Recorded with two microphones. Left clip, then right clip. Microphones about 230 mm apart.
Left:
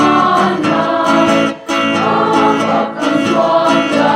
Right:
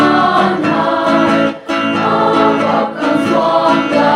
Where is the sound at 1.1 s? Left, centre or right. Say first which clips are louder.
Even; left.